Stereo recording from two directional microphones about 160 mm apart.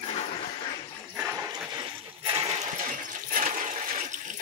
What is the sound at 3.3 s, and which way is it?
Toilet flush, 50° right (ahead or behind).